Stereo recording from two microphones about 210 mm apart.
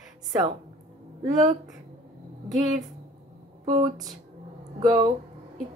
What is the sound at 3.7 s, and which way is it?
Speech, 15° right (ahead or behind).